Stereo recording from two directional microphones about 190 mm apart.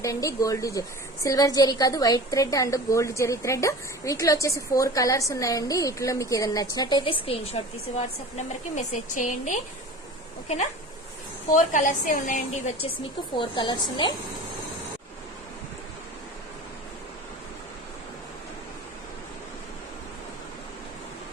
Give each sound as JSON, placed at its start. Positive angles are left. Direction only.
{"t": 0.0, "sound": "a woman's voice", "side_deg": 15}
{"t": 11.5, "sound": "a woman's voice", "side_deg": 45}
{"t": 13.3, "sound": "a woman's voice", "side_deg": 25}